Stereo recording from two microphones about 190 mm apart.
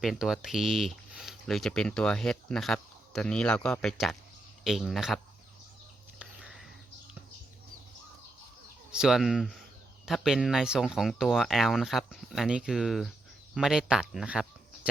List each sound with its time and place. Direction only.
0.0 s speech: centre (ahead or behind)
6.1 s a sound: 5° right (ahead or behind)
8.9 s speech: 5° right (ahead or behind)